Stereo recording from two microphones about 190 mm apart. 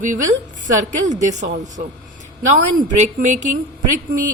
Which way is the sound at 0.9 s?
40° right (ahead or behind).